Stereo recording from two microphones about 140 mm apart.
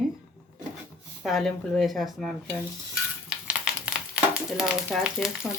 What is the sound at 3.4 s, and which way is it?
Speech, 5° right (ahead or behind).